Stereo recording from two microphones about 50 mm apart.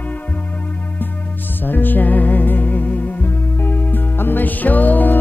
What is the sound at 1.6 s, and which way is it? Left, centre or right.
Music, left.